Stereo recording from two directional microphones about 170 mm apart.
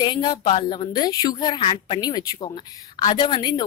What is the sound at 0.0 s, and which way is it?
Speech, 25° left (ahead or behind).